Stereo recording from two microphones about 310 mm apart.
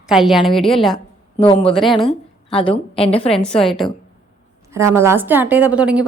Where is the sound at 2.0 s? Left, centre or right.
Centre.